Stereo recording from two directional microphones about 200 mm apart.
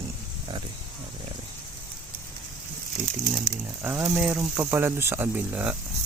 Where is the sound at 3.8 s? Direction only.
10° right (ahead or behind).